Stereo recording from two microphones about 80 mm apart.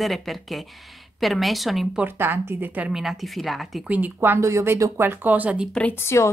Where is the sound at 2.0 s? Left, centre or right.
Right.